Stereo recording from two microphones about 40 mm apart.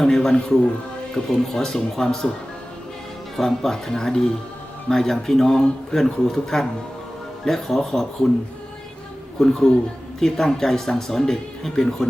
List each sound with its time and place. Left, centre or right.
0.0 s speech: centre
3.3 s speech: centre
9.4 s speech: centre